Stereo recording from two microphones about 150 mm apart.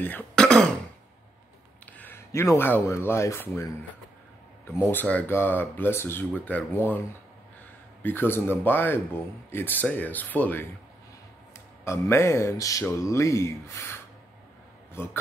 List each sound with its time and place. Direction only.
0.0 s speech: 10° left (ahead or behind)
1.9 s speech: 10° left (ahead or behind)
4.9 s speech: 10° left (ahead or behind)
8.0 s speech: 15° left (ahead or behind)
11.8 s a man's voice: 20° left (ahead or behind)